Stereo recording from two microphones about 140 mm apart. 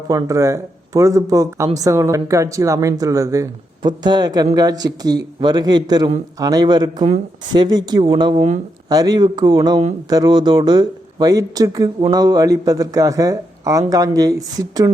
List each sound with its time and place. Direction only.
0.1 s speech: 25° right (ahead or behind)
8.4 s speech: 60° right (ahead or behind)
8.9 s speech: 25° right (ahead or behind)